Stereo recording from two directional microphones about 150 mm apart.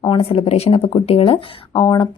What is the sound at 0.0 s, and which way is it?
Speech, 40° left (ahead or behind).